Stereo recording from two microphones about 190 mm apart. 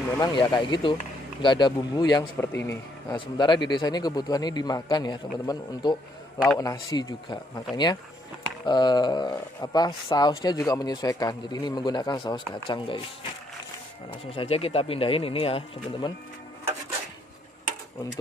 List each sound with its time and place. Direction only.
0.2 s speech: 25° left (ahead or behind)
14.2 s speech: 30° left (ahead or behind)